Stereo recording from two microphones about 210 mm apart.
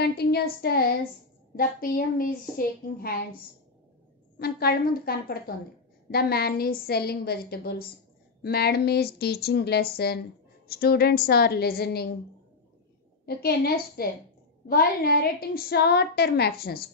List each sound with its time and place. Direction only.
0.0 s a woman's voice: 50° left (ahead or behind)
4.4 s a woman's voice: 45° left (ahead or behind)
13.2 s a woman's voice: 50° left (ahead or behind)